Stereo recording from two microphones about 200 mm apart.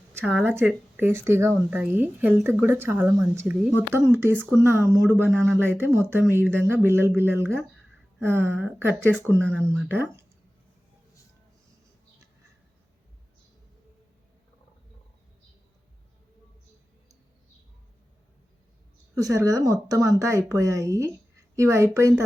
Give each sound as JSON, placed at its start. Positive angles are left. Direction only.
{"t": 0.1, "sound": "a sound", "side_deg": -10}
{"t": 0.4, "sound": "speech", "side_deg": -5}
{"t": 19.1, "sound": "a woman's voice", "side_deg": -15}